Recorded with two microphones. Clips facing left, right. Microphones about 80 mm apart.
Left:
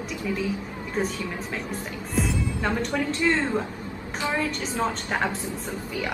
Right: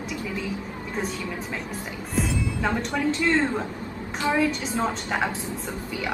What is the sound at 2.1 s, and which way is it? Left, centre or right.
A woman's voice, centre.